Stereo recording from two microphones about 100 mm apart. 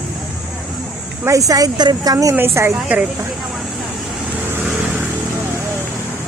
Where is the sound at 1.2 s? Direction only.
35° right (ahead or behind).